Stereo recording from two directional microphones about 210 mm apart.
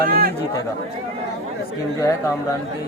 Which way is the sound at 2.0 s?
15° left (ahead or behind).